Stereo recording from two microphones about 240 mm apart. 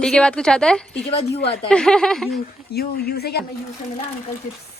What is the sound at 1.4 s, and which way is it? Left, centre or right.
Speech, left.